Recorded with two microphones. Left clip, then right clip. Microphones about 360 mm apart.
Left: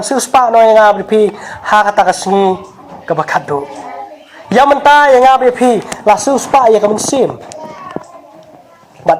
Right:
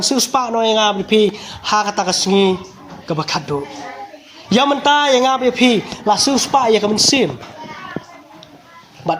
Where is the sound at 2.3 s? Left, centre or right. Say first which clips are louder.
Left 4 dB; left.